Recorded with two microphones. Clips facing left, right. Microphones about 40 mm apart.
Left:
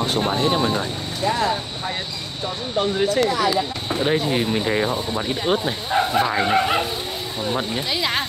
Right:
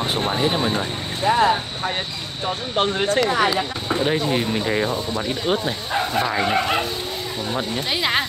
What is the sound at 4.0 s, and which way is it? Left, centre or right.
Speech, centre.